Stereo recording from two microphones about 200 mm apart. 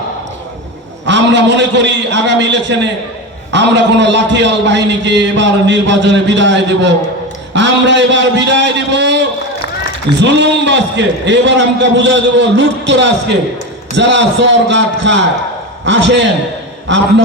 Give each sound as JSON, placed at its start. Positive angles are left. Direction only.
{"t": 1.0, "sound": "a man's voice", "side_deg": -65}
{"t": 10.2, "sound": "a man's voice", "side_deg": -60}